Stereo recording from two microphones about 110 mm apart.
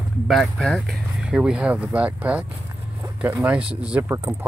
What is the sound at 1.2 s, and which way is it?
Speech, 10° right (ahead or behind).